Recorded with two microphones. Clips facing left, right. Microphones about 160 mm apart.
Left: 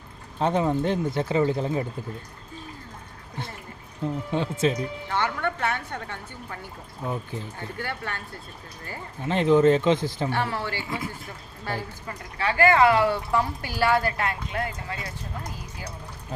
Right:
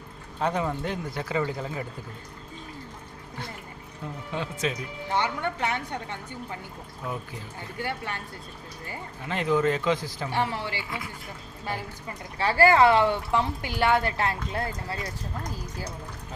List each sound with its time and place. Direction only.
0.3 s speech: 25° left (ahead or behind)
4.3 s speech: 30° left (ahead or behind)
5.1 s a woman's voice: 15° right (ahead or behind)
7.8 s a woman's voice: 15° right (ahead or behind)
9.2 s speech: 25° left (ahead or behind)
10.2 s a woman's voice: 15° right (ahead or behind)
12.4 s speech: 35° right (ahead or behind)